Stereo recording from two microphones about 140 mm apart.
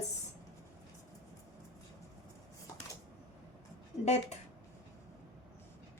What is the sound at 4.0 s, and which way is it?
Speech, 50° left (ahead or behind).